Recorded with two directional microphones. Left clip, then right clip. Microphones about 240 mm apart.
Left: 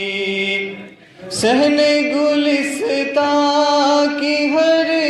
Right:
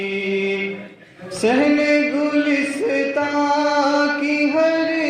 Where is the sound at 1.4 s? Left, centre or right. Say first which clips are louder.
Left 3 dB; left.